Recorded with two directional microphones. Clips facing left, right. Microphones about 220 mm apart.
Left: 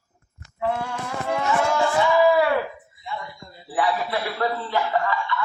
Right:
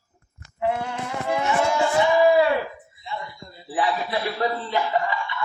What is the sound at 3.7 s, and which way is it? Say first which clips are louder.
Speech: left 1 dB; 20° right (ahead or behind).